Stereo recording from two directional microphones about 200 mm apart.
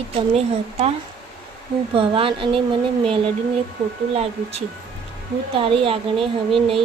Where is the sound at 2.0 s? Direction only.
25° right (ahead or behind).